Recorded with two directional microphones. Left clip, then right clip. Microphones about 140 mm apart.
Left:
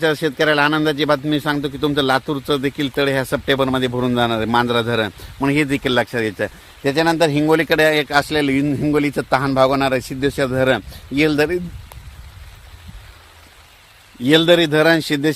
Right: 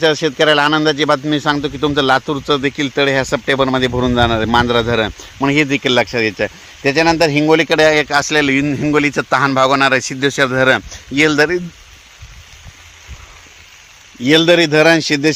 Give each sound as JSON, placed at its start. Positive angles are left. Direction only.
{"t": 0.0, "sound": "a man's voice", "side_deg": -35}
{"t": 14.3, "sound": "a man's voice", "side_deg": -40}